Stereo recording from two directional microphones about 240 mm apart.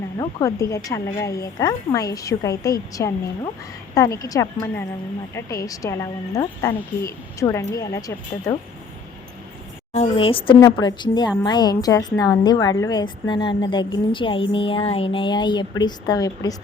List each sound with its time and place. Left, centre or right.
0.2 s speech: centre
9.9 s a woman's voice: left